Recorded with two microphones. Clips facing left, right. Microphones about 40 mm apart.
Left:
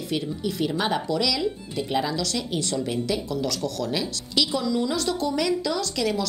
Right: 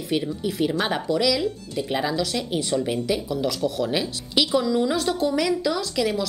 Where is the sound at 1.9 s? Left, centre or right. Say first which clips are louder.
Right 1 dB; centre.